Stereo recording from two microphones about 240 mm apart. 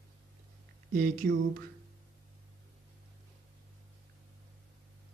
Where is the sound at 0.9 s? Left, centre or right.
Right.